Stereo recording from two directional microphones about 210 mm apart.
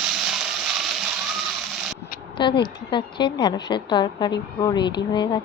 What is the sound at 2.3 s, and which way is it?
Speech, 20° left (ahead or behind).